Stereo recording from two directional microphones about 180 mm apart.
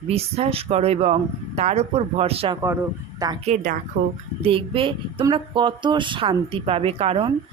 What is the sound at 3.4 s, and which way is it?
Speech, 50° right (ahead or behind).